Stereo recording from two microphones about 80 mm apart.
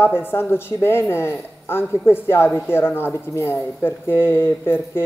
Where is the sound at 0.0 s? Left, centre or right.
Left.